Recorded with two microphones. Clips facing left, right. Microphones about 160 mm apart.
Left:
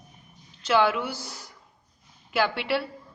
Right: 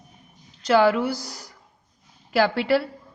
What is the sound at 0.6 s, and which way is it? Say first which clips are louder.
A woman's voice: right 5 dB; 40° right (ahead or behind).